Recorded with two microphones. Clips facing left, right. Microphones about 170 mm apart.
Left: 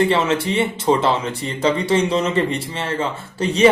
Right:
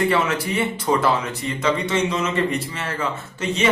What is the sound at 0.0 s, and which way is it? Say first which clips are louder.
A man's voice: left 3 dB; 25° left (ahead or behind).